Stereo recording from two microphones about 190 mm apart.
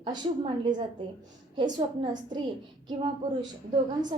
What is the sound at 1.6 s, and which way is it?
Speech, 25° right (ahead or behind).